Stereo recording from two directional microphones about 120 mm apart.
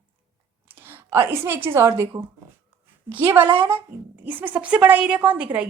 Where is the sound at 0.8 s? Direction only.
20° right (ahead or behind).